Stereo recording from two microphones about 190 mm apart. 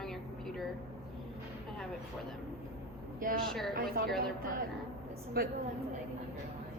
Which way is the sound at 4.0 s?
50° right (ahead or behind).